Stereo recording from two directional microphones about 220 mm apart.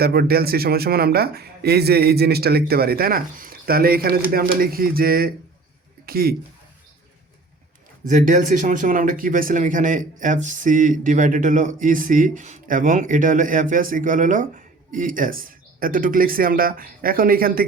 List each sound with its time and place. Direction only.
0.0 s speech: 45° right (ahead or behind)
8.0 s speech: 35° right (ahead or behind)